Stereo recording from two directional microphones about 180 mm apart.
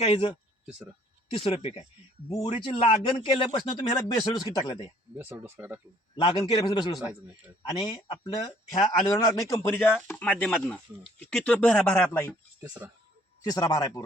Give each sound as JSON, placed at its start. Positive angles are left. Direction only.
{"t": 0.0, "sound": "speech", "side_deg": 35}
{"t": 0.6, "sound": "speech", "side_deg": -5}
{"t": 1.3, "sound": "speech", "side_deg": 35}
{"t": 5.1, "sound": "speech", "side_deg": -10}
{"t": 6.1, "sound": "speech", "side_deg": 25}
{"t": 7.0, "sound": "speech", "side_deg": -10}
{"t": 7.7, "sound": "speech", "side_deg": 25}
{"t": 12.8, "sound": "speech", "side_deg": -10}
{"t": 13.4, "sound": "speech", "side_deg": 20}